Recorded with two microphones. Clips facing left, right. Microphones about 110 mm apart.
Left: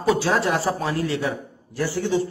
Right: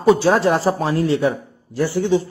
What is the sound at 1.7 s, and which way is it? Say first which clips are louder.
Speech: right 5 dB; 20° right (ahead or behind).